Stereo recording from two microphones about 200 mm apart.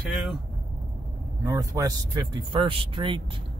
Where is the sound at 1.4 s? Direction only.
15° right (ahead or behind).